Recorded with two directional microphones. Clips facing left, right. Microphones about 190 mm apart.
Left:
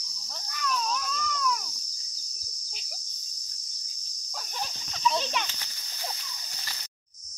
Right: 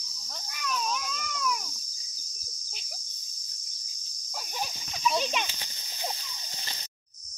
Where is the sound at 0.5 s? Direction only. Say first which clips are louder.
Left 2 dB; 15° right (ahead or behind).